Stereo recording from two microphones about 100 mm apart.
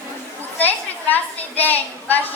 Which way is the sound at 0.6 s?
15° left (ahead or behind).